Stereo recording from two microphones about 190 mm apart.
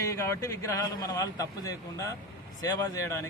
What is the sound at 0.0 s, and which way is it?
A man's voice, 15° left (ahead or behind).